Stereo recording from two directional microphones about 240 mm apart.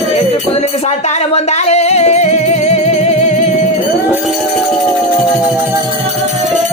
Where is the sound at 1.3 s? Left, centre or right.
Left.